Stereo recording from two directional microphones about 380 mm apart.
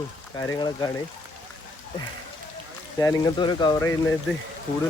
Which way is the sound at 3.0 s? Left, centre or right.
Centre.